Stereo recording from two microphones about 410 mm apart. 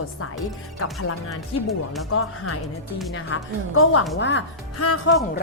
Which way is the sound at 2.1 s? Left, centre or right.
Left.